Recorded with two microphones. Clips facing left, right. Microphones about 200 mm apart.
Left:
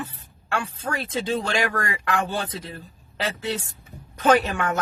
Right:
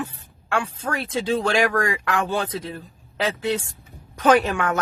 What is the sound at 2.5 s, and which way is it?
Speech, 10° right (ahead or behind).